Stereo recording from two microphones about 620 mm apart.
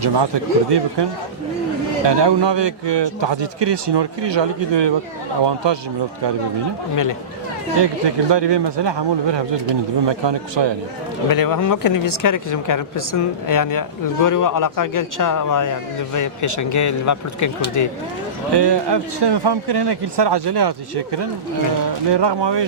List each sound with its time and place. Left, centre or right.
0.0 s a man's voice: right
2.0 s a man's voice: right
6.9 s speech: left
7.8 s a man's voice: right
11.3 s speech: left
18.5 s a man's voice: right